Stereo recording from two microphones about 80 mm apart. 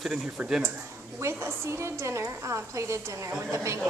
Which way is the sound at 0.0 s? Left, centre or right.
Centre.